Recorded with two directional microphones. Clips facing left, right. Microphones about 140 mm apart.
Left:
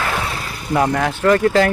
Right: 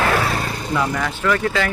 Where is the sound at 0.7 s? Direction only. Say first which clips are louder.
Left 6 dB; 50° left (ahead or behind).